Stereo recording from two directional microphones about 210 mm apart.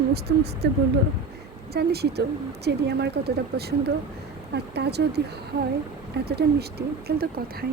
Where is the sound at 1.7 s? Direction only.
50° right (ahead or behind).